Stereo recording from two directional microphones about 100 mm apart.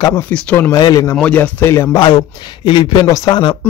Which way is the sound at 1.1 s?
15° left (ahead or behind).